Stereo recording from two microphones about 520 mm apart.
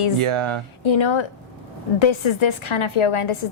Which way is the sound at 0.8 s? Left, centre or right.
Left.